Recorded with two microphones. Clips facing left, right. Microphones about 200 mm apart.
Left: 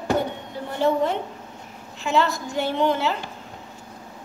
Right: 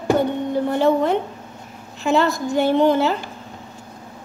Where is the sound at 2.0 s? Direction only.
45° right (ahead or behind).